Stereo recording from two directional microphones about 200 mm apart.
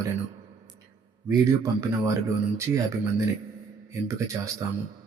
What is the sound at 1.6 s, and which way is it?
Speech, 15° right (ahead or behind).